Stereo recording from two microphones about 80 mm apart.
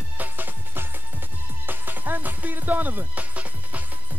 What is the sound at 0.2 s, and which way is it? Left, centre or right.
Music, right.